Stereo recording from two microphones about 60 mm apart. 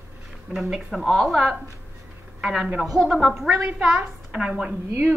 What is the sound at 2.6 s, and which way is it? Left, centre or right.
Speech, right.